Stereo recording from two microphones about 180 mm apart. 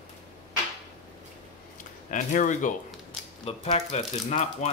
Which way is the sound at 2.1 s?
45° left (ahead or behind).